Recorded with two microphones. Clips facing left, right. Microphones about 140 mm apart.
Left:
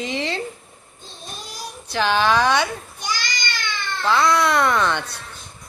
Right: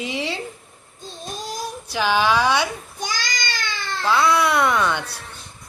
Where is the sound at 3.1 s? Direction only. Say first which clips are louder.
Left 3 dB; 45° right (ahead or behind).